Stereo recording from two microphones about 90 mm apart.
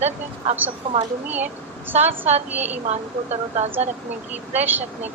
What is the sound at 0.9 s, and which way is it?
Speech, 80° right.